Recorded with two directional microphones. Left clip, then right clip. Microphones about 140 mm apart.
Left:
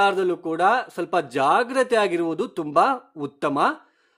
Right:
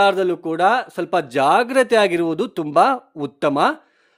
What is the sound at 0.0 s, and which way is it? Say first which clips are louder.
Speech: right 4 dB; 30° right (ahead or behind).